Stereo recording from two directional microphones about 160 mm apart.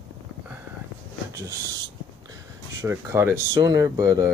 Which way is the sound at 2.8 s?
15° right (ahead or behind).